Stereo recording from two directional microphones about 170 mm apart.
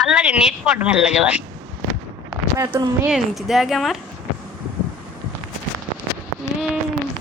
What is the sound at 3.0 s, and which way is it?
Speech, centre (ahead or behind).